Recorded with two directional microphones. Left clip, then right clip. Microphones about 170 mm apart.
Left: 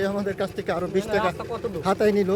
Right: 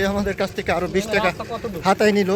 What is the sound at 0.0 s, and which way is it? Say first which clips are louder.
A man's voice: right 4 dB; 20° right (ahead or behind).